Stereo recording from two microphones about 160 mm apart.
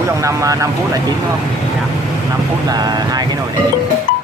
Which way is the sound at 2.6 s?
25° right (ahead or behind).